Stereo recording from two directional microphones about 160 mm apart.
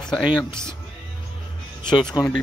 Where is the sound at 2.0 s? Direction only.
25° left (ahead or behind).